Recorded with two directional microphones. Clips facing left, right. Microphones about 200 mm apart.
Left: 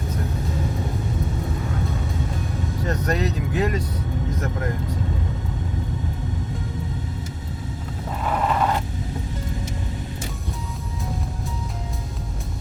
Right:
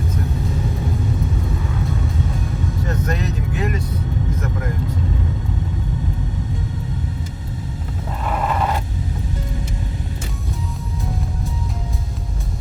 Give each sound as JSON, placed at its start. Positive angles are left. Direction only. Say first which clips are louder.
{"t": 3.1, "sound": "vehicle", "louder": "left 1 dB", "side_deg": 35}